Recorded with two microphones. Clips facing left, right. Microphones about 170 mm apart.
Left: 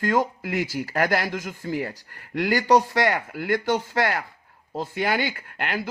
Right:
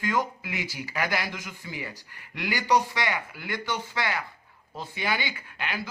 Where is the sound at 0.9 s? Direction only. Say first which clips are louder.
Left 6 dB; 55° left (ahead or behind).